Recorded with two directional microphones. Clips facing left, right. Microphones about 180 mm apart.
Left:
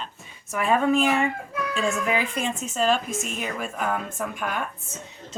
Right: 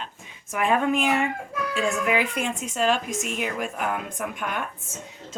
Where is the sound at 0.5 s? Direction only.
15° right (ahead or behind).